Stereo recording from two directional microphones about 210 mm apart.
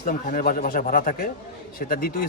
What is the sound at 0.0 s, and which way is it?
A man's voice, 40° left (ahead or behind).